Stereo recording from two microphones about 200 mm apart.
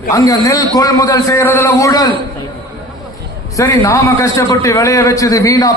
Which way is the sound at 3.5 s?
15° left (ahead or behind).